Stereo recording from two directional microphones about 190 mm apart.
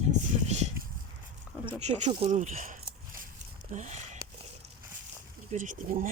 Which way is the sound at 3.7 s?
40° right (ahead or behind).